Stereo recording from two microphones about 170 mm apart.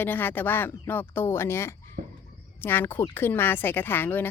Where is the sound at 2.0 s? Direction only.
55° right (ahead or behind).